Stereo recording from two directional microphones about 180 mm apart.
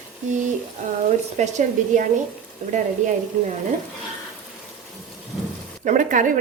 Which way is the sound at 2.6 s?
45° right (ahead or behind).